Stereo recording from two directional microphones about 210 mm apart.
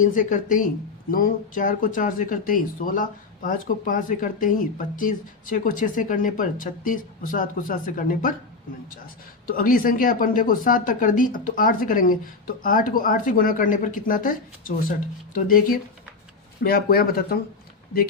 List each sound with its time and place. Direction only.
0.0 s speech: 40° left (ahead or behind)
9.5 s speech: 45° left (ahead or behind)